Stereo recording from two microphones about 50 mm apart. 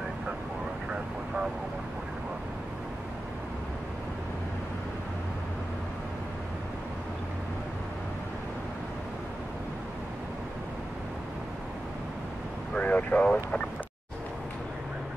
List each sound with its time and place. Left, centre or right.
12.7 s vehicle: left